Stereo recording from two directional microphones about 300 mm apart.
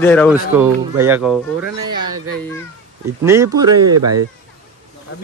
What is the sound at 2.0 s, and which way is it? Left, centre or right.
Speech, right.